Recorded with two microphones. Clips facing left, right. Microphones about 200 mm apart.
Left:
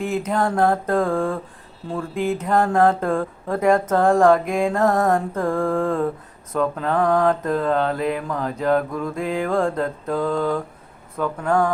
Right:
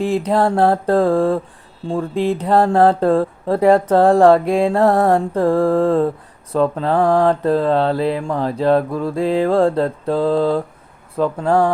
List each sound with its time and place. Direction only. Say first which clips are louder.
0.0 s speech: right 5 dB; 35° right (ahead or behind)